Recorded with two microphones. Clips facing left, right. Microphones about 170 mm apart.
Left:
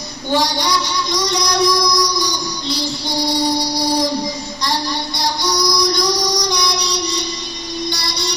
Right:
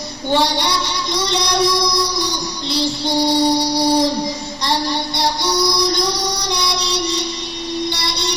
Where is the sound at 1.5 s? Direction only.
30° right (ahead or behind).